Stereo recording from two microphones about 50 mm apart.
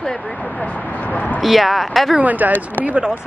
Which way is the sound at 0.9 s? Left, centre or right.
Left.